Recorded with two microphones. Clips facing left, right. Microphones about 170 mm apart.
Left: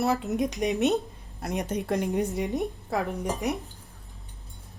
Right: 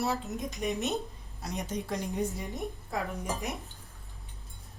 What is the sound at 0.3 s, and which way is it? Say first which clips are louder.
A woman's voice: left 7 dB; 75° left (ahead or behind).